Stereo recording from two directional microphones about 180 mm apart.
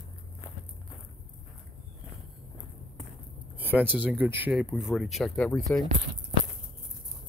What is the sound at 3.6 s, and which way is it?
Speech, 10° right (ahead or behind).